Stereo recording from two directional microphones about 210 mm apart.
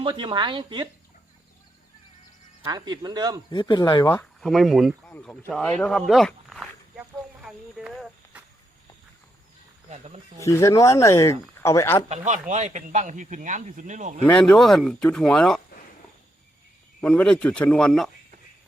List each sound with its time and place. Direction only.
0.0 s speech: 20° right (ahead or behind)
2.6 s speech: 20° right (ahead or behind)
3.5 s speech: 20° left (ahead or behind)
4.2 s speech: centre (ahead or behind)
5.1 s speech: 10° left (ahead or behind)
10.4 s speech: 15° left (ahead or behind)
12.0 s speech: 35° right (ahead or behind)
14.3 s speech: 5° left (ahead or behind)
17.0 s speech: 5° left (ahead or behind)